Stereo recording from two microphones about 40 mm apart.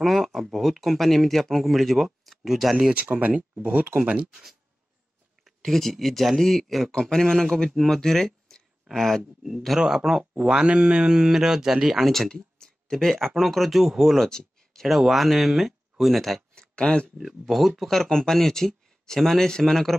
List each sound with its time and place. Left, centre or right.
0.0 s speech: centre
2.9 s speech: right
4.0 s speech: right
4.3 s speech: centre
5.6 s speech: centre
10.4 s speech: right
11.1 s speech: centre
12.5 s a sound: centre
13.5 s speech: centre
14.1 s speech: centre
14.9 s speech: centre
16.5 s a sound: left
17.2 s speech: centre
18.1 s speech: centre